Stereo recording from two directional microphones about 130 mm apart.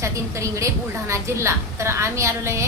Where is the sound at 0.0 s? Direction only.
25° right (ahead or behind).